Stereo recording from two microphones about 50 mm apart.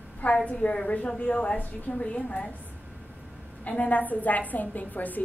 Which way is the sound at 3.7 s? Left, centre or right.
Left.